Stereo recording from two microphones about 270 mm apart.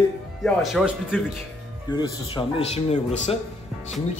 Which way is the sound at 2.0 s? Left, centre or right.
Centre.